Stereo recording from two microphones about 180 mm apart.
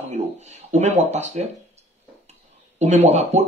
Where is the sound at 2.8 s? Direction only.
40° right (ahead or behind).